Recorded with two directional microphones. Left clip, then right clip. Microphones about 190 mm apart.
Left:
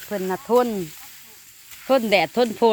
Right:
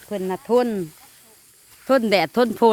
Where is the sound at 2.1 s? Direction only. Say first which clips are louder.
Even; 25° right (ahead or behind).